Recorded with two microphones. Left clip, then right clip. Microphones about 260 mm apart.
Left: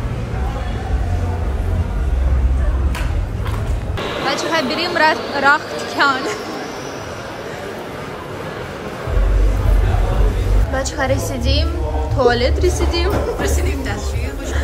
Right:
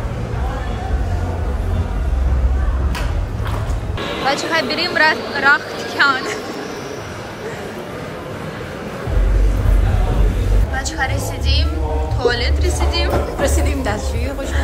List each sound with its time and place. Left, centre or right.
4.3 s a woman's voice: centre
10.8 s speech: left
13.4 s speech: centre